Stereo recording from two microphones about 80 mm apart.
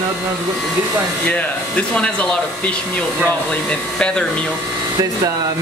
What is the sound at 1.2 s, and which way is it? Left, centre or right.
Speech, centre.